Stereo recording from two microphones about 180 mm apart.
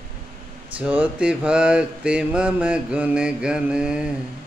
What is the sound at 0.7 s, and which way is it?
Mantra, 10° right (ahead or behind).